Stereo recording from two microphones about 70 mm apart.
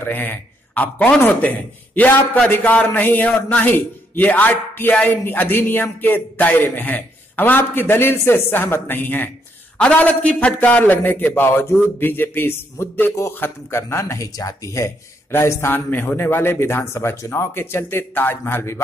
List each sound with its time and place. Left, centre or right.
0.0 s a man's voice: left
9.8 s a man's voice: centre; by 14.9 s left
15.3 s a man's voice: left
15.7 s a man's voice: left